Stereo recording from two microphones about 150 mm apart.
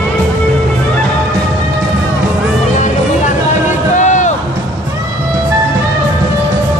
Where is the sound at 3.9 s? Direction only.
55° left (ahead or behind).